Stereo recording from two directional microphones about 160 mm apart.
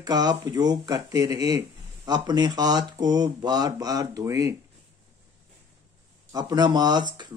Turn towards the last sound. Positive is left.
turn(degrees=-25)  # may be behind; listen again after turning